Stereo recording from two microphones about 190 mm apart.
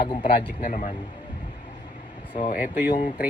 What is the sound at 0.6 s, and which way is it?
Speech, 40° left (ahead or behind).